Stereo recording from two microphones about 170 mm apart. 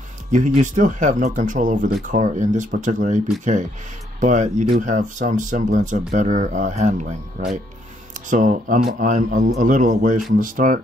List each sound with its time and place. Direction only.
0.3 s speech: 45° right (ahead or behind)